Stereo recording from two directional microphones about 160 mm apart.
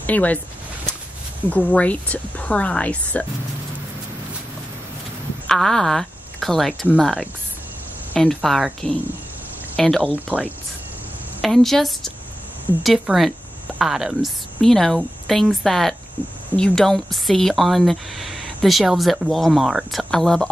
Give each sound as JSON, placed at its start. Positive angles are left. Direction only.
{"t": 0.0, "sound": "speech", "side_deg": 10}
{"t": 1.7, "sound": "speech", "side_deg": 10}
{"t": 5.5, "sound": "speech", "side_deg": 0}
{"t": 10.1, "sound": "speech", "side_deg": -10}
{"t": 11.4, "sound": "speech", "side_deg": 0}